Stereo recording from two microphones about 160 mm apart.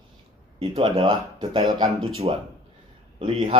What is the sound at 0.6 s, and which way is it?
Speech, 30° right (ahead or behind).